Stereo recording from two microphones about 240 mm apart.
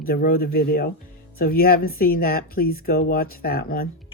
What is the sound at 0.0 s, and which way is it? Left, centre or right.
Speech, left.